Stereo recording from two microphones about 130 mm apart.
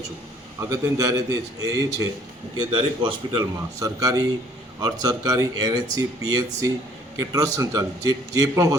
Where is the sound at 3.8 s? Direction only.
25° right (ahead or behind).